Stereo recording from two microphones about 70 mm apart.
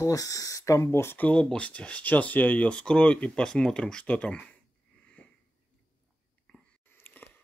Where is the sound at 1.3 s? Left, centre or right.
Centre.